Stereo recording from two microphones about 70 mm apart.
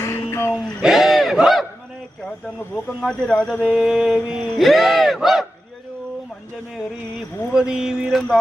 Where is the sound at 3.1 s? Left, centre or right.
Centre.